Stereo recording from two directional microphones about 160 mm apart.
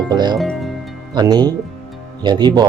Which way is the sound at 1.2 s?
25° right (ahead or behind).